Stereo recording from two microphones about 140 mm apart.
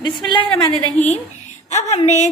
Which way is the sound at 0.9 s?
55° left (ahead or behind).